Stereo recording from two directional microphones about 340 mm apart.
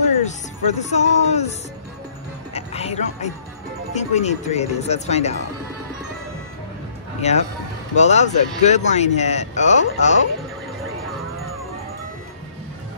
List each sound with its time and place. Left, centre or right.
0.2 s speech: left
2.5 s speech: centre
7.2 s speech: centre